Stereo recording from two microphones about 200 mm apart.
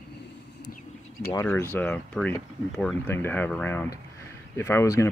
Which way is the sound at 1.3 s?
10° left (ahead or behind).